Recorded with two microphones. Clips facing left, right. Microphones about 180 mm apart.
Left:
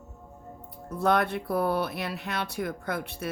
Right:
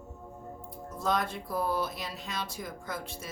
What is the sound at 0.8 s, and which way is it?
Speech, 65° left (ahead or behind).